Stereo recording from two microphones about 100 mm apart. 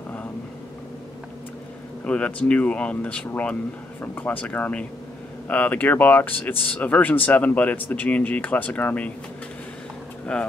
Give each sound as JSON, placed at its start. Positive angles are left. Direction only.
{"t": 2.0, "sound": "speech", "side_deg": 10}
{"t": 10.3, "sound": "speech", "side_deg": 10}